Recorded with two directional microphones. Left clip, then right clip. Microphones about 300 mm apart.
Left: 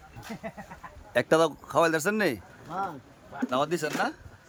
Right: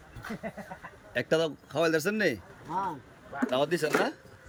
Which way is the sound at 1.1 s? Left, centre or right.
Centre.